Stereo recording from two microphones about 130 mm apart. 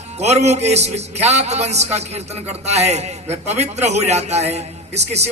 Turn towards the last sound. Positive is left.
turn(degrees=-55)  # may be behind; listen again after turning